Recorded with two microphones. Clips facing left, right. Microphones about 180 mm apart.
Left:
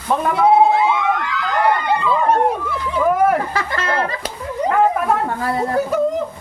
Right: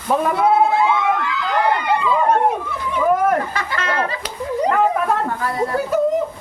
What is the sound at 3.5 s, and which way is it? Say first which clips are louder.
Chatter: left 2 dB; 35° left (ahead or behind).